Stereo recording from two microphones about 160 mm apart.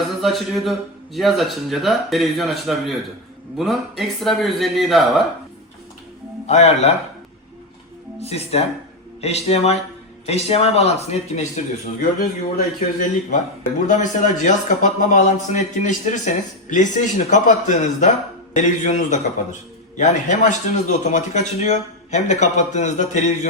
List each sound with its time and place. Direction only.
0.2 s speech: centre (ahead or behind)
6.5 s a man's voice: 40° left (ahead or behind)
8.2 s a man's voice: 40° left (ahead or behind)